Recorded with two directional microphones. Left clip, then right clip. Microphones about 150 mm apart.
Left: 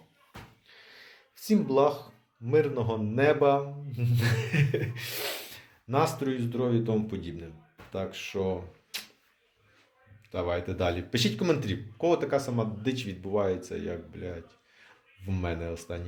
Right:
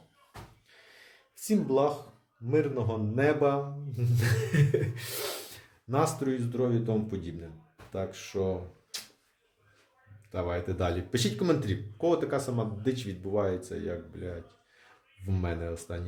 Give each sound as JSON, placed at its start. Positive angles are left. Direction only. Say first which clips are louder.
{"t": 1.5, "sound": "a man's voice", "louder": "left 2 dB", "side_deg": -15}
{"t": 10.3, "sound": "a man's voice", "louder": "left 2 dB", "side_deg": -20}